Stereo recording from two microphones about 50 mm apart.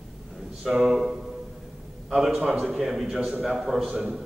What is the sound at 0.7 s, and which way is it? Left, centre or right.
A man's voice, centre.